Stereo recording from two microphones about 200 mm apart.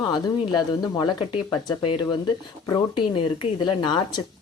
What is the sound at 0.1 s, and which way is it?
Speech, 20° left (ahead or behind).